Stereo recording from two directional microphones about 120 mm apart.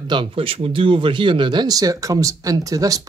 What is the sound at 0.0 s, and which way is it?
Speech, 40° right (ahead or behind).